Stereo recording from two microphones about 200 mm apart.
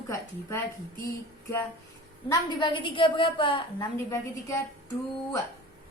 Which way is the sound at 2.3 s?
20° left (ahead or behind).